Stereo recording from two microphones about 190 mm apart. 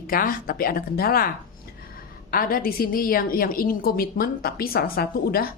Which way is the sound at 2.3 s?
50° left (ahead or behind).